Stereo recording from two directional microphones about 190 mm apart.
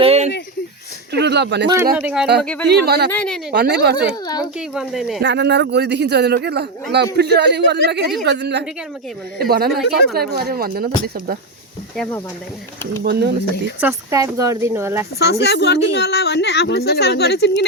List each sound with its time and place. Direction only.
0.0 s a sound: 35° right (ahead or behind)
1.2 s speech: 65° right (ahead or behind)
2.0 s speech: 5° right (ahead or behind)
2.4 s speech: 5° left (ahead or behind)
2.6 s speech: 55° right (ahead or behind)
3.1 s speech: 5° left (ahead or behind)
3.5 s speech: 60° right (ahead or behind)
4.5 s speech: 5° right (ahead or behind)
5.2 s speech: 65° right (ahead or behind)
9.4 s speech: 55° right (ahead or behind)
13.0 s speech: 60° right (ahead or behind)
13.8 s speech: 15° right (ahead or behind)
15.2 s speech: 60° left (ahead or behind)